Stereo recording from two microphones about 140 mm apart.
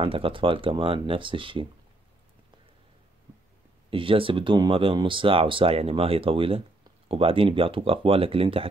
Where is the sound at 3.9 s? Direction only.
40° right (ahead or behind).